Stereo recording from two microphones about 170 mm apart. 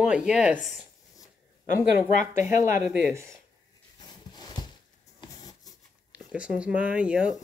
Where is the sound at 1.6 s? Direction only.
50° left (ahead or behind).